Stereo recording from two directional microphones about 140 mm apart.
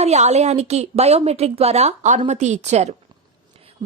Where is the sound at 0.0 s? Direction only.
50° right (ahead or behind).